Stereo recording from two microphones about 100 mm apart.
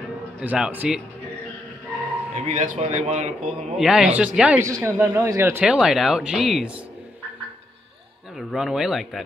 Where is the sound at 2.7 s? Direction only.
70° right (ahead or behind).